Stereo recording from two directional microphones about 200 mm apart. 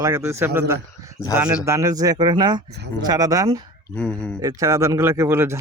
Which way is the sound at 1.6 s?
15° right (ahead or behind).